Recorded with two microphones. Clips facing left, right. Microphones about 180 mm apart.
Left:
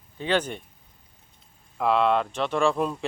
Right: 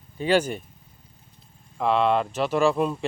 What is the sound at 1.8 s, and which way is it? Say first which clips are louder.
Speech: right 1 dB; centre (ahead or behind).